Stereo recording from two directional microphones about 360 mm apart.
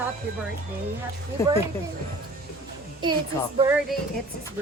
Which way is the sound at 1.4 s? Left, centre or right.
Centre.